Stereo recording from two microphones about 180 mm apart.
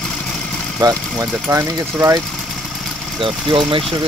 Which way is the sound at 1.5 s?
15° right (ahead or behind).